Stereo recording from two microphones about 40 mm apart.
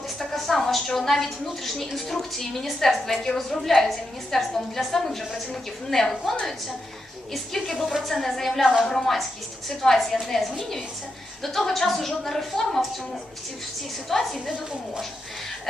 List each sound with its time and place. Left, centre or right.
0.3 s a sound: centre
1.2 s a woman's voice: centre
8.0 s a woman's voice: centre
14.1 s a woman's voice: centre
14.5 s a woman's voice: right